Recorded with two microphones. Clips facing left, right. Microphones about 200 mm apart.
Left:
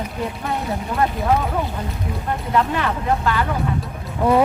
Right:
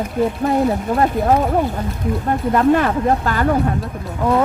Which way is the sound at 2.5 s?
45° right (ahead or behind).